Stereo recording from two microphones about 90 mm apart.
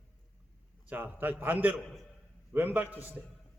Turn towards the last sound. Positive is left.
turn(degrees=-20)  # may be behind; listen again after turning